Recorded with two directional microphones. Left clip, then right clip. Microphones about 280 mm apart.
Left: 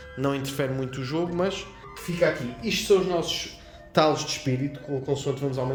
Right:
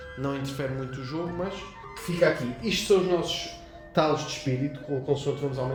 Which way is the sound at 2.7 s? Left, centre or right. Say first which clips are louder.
Left 1 dB; left.